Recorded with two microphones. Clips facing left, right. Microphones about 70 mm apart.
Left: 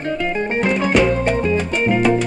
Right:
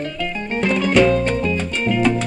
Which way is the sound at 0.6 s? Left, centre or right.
Left.